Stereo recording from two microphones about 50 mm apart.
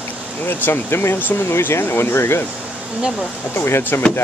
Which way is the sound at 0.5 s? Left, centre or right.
Left.